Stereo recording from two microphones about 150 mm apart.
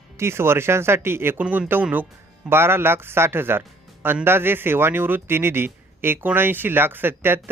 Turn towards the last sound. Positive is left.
turn(degrees=-15)  # may be behind; listen again after turning